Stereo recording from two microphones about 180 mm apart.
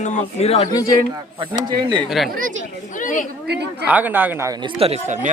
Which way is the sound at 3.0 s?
45° left (ahead or behind).